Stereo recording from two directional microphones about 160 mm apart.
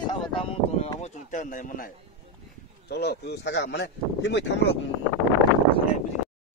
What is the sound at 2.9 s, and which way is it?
Speech, 90° left.